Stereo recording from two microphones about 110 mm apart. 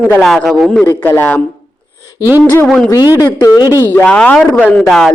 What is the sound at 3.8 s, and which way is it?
A woman's voice, 15° left (ahead or behind).